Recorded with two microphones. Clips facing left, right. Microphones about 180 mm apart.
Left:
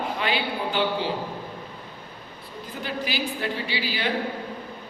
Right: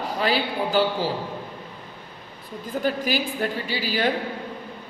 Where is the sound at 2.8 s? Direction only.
45° right (ahead or behind).